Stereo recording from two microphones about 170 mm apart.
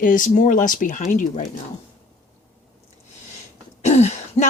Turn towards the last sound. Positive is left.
turn(degrees=40)  # may be behind; listen again after turning